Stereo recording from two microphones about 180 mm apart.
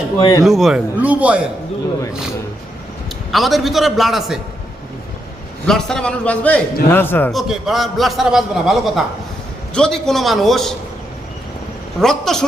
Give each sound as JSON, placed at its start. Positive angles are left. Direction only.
{"t": 0.2, "sound": "speech", "side_deg": 20}
{"t": 0.4, "sound": "a man's voice", "side_deg": 0}
{"t": 3.3, "sound": "a man's voice", "side_deg": 0}
{"t": 5.6, "sound": "a man's voice", "side_deg": 5}
{"t": 7.3, "sound": "a man's voice", "side_deg": 0}
{"t": 11.9, "sound": "a man's voice", "side_deg": 0}